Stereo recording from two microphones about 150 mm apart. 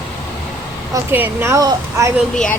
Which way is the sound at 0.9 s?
15° right (ahead or behind).